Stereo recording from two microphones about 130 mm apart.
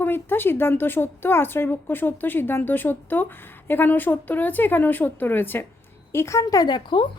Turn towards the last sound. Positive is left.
turn(degrees=35)  # may be behind; listen again after turning